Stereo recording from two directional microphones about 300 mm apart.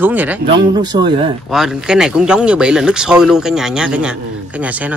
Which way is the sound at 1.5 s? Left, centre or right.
Centre.